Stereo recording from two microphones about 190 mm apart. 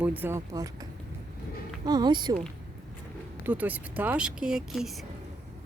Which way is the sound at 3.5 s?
10° right (ahead or behind).